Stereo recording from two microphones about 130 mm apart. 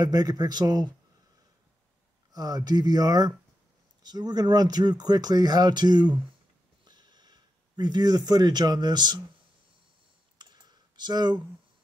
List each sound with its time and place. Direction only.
0.0 s speech: 30° right (ahead or behind)
2.3 s speech: 30° right (ahead or behind)
6.8 s a sound: 35° right (ahead or behind)
10.4 s clicking: 35° right (ahead or behind)